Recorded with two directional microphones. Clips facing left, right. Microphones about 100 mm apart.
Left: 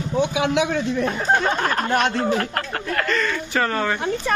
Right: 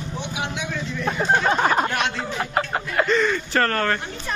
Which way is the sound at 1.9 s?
40° left (ahead or behind).